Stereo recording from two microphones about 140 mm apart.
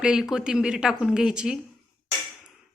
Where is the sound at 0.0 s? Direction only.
5° right (ahead or behind).